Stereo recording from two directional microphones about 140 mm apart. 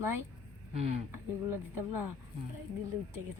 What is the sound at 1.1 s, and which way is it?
Speech, 15° right (ahead or behind).